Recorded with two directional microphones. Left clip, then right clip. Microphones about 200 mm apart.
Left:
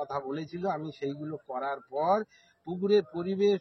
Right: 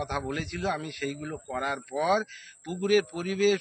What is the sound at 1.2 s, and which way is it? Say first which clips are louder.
Speech: right 2 dB; 20° right (ahead or behind).